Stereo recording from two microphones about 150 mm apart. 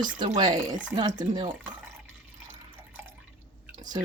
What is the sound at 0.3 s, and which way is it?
Speech, 25° right (ahead or behind).